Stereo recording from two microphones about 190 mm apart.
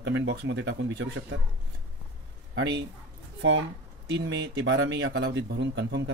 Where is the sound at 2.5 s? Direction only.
70° right (ahead or behind).